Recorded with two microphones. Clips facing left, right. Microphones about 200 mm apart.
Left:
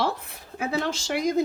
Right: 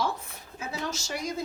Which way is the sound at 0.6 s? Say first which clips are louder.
Left 7 dB; 65° left (ahead or behind).